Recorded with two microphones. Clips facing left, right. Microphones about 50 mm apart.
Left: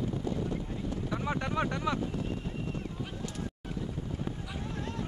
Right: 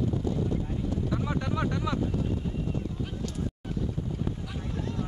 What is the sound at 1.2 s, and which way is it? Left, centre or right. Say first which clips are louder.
Vehicle: right 1 dB; left.